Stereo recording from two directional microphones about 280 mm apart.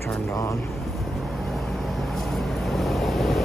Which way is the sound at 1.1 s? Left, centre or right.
Centre.